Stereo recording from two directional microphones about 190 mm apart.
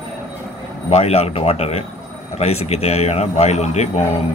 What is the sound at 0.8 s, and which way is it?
A man's voice, 35° left (ahead or behind).